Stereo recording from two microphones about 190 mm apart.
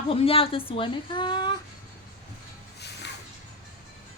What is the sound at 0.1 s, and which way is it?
A woman's voice, 30° left (ahead or behind).